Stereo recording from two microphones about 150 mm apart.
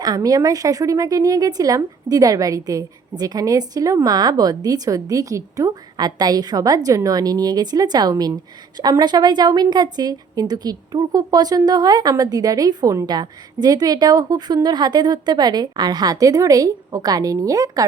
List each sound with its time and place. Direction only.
0.0 s a woman's voice: 25° right (ahead or behind)